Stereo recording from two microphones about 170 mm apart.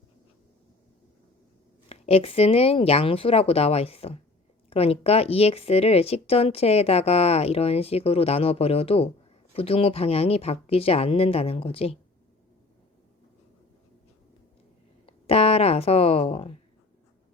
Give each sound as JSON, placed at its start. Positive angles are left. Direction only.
{"t": 1.9, "sound": "speech", "side_deg": 35}
{"t": 15.0, "sound": "speech", "side_deg": 35}